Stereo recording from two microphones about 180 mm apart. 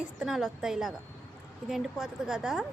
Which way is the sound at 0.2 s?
Centre (ahead or behind).